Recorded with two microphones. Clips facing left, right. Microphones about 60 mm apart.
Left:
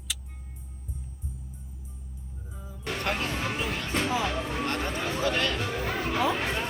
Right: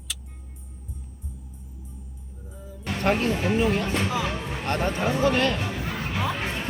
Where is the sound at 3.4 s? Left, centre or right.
Right.